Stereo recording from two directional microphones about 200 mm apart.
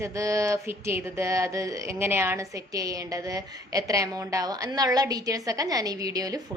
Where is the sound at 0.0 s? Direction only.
15° right (ahead or behind).